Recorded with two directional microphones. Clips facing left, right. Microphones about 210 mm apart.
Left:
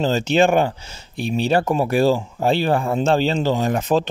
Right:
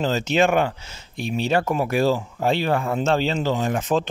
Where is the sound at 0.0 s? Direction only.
30° left (ahead or behind).